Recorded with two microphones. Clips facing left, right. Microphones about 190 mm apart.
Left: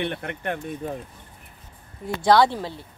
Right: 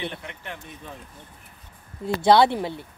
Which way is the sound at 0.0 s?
60° left (ahead or behind).